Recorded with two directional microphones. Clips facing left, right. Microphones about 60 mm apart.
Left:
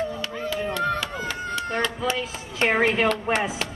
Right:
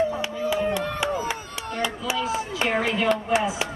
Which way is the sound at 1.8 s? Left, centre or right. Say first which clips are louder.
Right 4 dB; centre.